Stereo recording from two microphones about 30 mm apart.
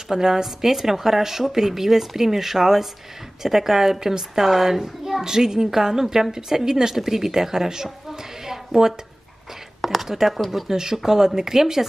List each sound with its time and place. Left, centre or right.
0.1 s a woman's voice: centre
10.7 s a woman's voice: centre